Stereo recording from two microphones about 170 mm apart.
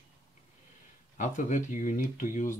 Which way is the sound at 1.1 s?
50° left (ahead or behind).